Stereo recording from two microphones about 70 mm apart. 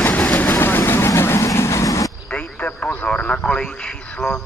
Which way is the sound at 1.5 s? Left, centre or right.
Left.